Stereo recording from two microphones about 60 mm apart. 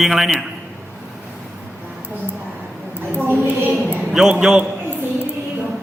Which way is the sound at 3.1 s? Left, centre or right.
Right.